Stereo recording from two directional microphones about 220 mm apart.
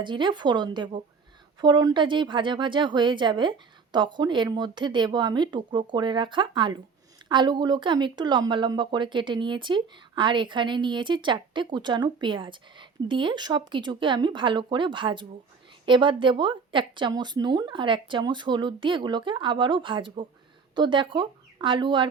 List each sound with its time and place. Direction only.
0.0 s speech: 20° right (ahead or behind)